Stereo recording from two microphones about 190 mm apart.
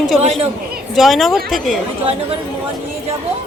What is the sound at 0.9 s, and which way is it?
Speech, centre (ahead or behind).